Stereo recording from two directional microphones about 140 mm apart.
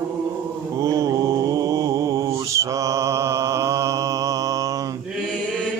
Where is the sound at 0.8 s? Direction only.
25° right (ahead or behind).